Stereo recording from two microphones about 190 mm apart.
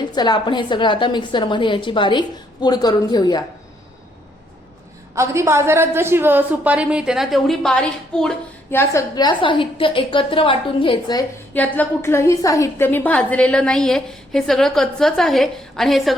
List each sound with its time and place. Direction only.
0.0 s a woman's voice: 20° left (ahead or behind)
5.1 s a woman's voice: 15° right (ahead or behind); by 11.2 s 25° left (ahead or behind)
11.5 s a woman's voice: 10° left (ahead or behind)